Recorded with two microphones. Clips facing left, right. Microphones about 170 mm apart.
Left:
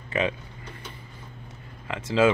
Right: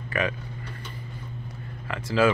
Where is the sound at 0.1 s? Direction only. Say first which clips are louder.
Left 1 dB; 20° left (ahead or behind).